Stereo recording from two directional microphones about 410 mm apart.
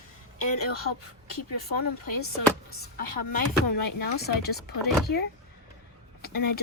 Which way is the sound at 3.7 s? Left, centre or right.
Left.